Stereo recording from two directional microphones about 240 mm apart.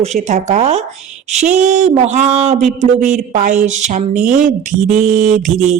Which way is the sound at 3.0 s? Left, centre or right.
Right.